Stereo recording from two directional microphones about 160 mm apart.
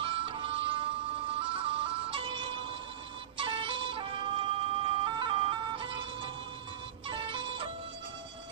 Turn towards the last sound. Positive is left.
turn(degrees=-35)  # may be behind; listen again after turning